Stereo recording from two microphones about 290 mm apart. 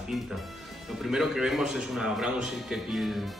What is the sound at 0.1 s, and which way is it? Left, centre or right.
A man's voice, centre.